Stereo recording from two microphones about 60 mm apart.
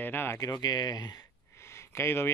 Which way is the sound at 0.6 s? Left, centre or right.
Left.